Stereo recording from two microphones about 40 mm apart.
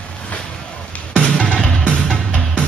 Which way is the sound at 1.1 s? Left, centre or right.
Left.